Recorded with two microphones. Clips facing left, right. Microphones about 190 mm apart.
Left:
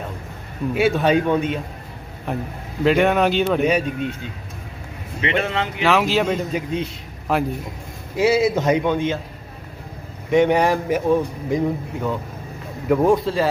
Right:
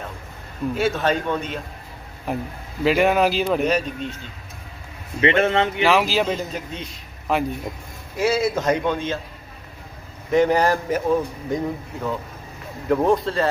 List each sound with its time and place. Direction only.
0.7 s a man's voice: 15° left (ahead or behind)
2.3 s a man's voice: centre (ahead or behind)
5.2 s speech: 35° right (ahead or behind)
5.8 s a man's voice: centre (ahead or behind)
8.1 s a man's voice: 20° left (ahead or behind)
10.3 s a man's voice: centre (ahead or behind)